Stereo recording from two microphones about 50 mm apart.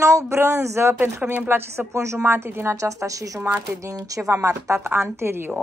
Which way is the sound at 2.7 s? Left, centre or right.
Right.